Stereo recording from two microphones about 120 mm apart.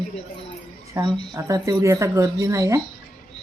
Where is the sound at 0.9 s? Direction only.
35° right (ahead or behind).